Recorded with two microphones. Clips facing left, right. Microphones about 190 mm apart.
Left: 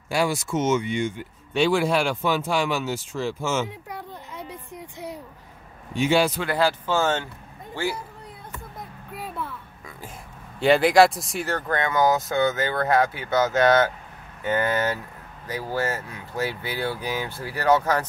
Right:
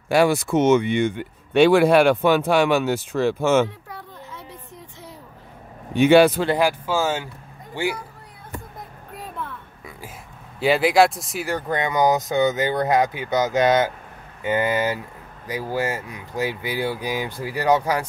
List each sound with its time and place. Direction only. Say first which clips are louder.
0.1 s speech: right 6 dB; 60° right (ahead or behind)
3.9 s a sound: left 2 dB; 15° left (ahead or behind)
5.9 s speech: right 7 dB; 60° right (ahead or behind)
6.4 s speech: right 3 dB; 20° right (ahead or behind)
6.9 s speech: even; 10° right (ahead or behind)
9.1 s a sound: left 1 dB; 5° left (ahead or behind)
10.6 s speech: even; centre (ahead or behind)
11.4 s speech: right 2 dB; 15° right (ahead or behind)